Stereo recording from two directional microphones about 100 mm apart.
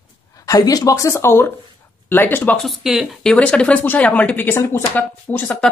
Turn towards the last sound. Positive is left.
turn(degrees=20)  # may be behind; listen again after turning